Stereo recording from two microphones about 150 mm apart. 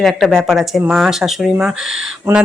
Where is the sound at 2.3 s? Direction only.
15° right (ahead or behind).